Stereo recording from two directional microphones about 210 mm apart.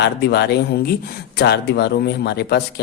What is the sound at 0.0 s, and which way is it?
Speech, 55° left (ahead or behind).